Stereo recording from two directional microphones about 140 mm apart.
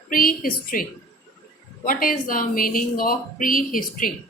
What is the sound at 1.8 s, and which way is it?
A woman's voice, 80° left.